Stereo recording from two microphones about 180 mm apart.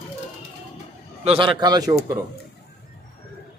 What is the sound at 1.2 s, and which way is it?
Speech, 30° right (ahead or behind).